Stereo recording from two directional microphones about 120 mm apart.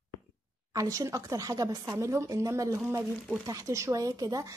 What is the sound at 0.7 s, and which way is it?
A woman's voice, 30° right (ahead or behind).